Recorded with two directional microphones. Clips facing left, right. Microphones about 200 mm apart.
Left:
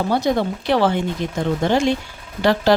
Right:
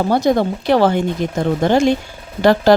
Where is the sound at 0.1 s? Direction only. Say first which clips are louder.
Right 4 dB; 45° right (ahead or behind).